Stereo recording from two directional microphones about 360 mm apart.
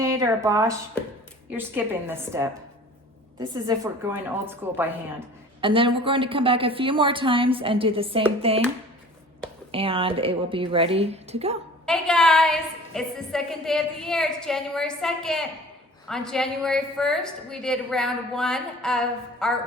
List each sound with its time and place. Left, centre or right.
0.0 s a woman's voice: centre
3.5 s a woman's voice: centre
9.7 s a woman's voice: centre
11.9 s a woman's voice: centre